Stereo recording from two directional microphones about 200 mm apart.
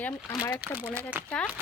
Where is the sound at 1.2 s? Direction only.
10° right (ahead or behind).